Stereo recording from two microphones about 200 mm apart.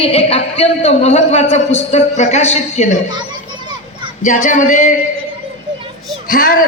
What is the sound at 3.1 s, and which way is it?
Children playing, 20° right (ahead or behind).